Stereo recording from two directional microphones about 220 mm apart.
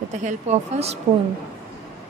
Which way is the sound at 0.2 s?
30° right (ahead or behind).